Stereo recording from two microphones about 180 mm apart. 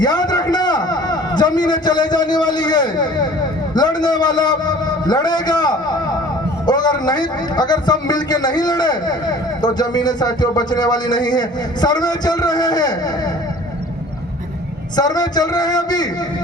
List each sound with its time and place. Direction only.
0.0 s a sound: 25° left (ahead or behind)
3.8 s a man's voice: 25° left (ahead or behind)
14.9 s a man's voice: 20° left (ahead or behind)